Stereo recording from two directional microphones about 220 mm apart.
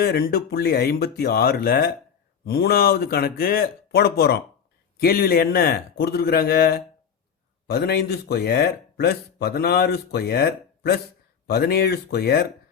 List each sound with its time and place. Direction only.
0.0 s speech: 45° left (ahead or behind)